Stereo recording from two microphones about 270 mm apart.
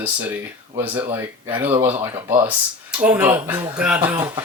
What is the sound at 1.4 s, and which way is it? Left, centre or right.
Speech, centre.